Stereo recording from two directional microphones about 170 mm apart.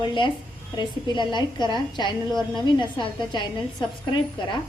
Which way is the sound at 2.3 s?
Centre (ahead or behind).